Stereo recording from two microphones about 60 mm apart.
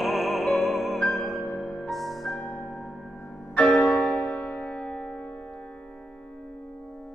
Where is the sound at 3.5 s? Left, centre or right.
Left.